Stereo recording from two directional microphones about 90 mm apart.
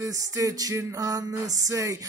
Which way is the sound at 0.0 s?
40° right (ahead or behind).